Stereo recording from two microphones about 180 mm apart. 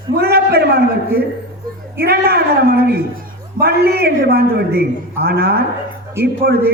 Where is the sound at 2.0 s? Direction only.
60° right (ahead or behind).